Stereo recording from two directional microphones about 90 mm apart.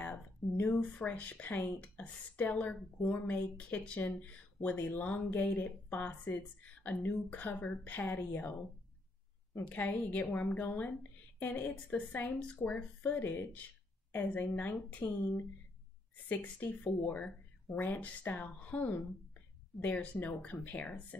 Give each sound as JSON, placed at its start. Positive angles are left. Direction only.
{"t": 0.0, "sound": "a woman's voice", "side_deg": 15}